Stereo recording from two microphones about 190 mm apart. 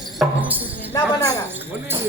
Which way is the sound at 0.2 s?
10° right (ahead or behind).